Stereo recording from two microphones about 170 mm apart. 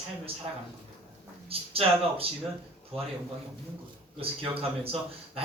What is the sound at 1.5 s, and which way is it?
Speech, 35° right (ahead or behind).